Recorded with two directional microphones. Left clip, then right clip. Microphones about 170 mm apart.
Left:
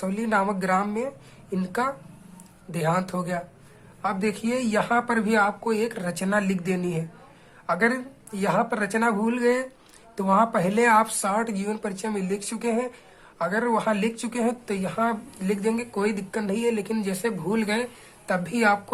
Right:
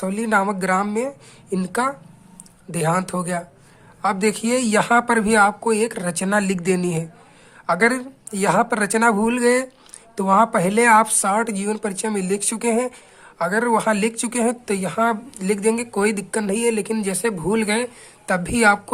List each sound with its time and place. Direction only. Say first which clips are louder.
0.0 s speech: right 5 dB; 25° right (ahead or behind)